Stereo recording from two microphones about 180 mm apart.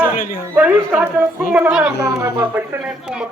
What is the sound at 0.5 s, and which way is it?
A man's voice, 10° right (ahead or behind).